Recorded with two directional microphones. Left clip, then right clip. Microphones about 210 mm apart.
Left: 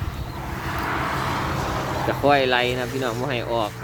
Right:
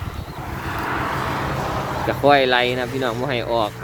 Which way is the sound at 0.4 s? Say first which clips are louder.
Right 1 dB; 25° left (ahead or behind).